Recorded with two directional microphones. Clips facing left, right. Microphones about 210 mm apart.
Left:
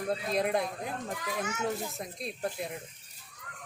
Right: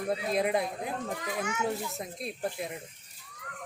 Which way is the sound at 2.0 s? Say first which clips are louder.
Right 1 dB; centre (ahead or behind).